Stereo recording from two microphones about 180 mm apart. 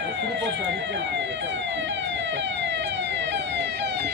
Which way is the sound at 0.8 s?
85° right.